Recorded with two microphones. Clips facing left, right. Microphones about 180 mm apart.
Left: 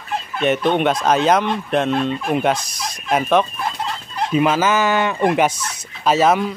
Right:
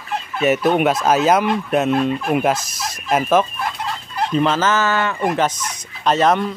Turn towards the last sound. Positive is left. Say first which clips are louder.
# left 1 dB
turn(degrees=5)  # may be behind; listen again after turning